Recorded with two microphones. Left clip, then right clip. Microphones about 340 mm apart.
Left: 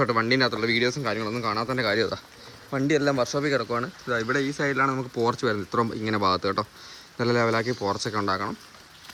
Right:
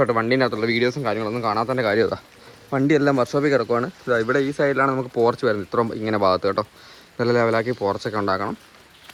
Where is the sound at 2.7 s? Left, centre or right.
Right.